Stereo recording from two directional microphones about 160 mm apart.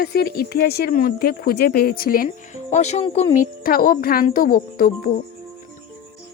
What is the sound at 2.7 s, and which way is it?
Speech, 45° left (ahead or behind).